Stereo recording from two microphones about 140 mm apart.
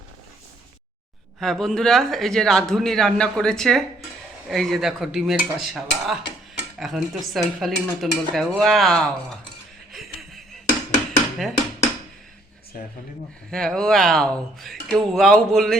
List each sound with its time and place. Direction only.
1.4 s a man's voice: 5° left (ahead or behind)
9.9 s a sound: centre (ahead or behind)
13.5 s a man's voice: 5° left (ahead or behind)